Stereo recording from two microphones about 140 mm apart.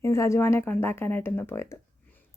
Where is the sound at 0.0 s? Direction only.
20° left (ahead or behind).